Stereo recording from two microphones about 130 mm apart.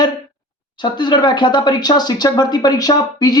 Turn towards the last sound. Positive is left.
turn(degrees=30)  # may be behind; listen again after turning